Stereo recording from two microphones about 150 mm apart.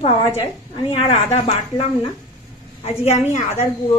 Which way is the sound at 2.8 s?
45° left (ahead or behind).